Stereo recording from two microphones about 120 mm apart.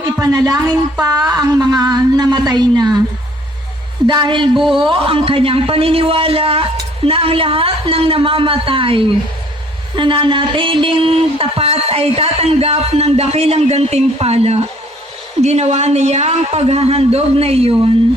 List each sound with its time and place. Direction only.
0.0 s a woman's voice: 30° right (ahead or behind)
4.0 s a woman's voice: 35° right (ahead or behind)
4.5 s a man's voice: centre (ahead or behind)
4.8 s a man's voice: 45° right (ahead or behind)